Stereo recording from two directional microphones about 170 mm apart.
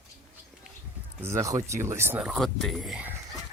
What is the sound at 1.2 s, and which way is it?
Speech, 20° right (ahead or behind).